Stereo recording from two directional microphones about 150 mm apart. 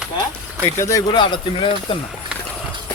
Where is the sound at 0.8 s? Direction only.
20° left (ahead or behind).